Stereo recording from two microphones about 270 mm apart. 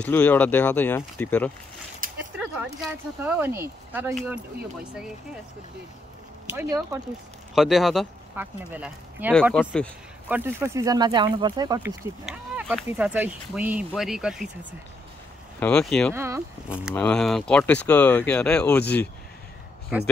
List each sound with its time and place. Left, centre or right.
0.0 s speech: centre
2.0 s a sound: right
2.3 s speech: centre
6.5 s speech: centre
10.2 s speech: centre
16.2 s speech: centre